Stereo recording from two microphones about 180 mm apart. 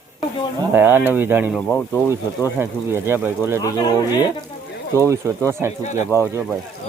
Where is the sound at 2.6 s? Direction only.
15° right (ahead or behind).